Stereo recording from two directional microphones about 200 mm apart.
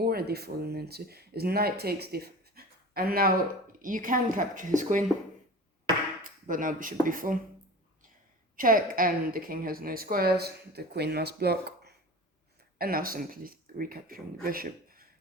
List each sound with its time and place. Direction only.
0.0 s speech: 50° right (ahead or behind)
6.2 s speech: 40° right (ahead or behind)
8.5 s a woman's voice: 45° right (ahead or behind)